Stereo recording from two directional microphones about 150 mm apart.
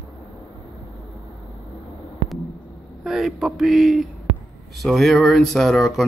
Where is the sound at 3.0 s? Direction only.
5° right (ahead or behind).